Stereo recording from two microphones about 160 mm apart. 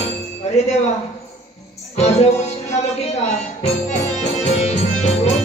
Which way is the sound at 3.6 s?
45° left (ahead or behind).